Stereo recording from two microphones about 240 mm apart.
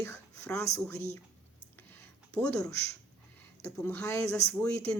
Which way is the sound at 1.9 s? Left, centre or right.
Centre.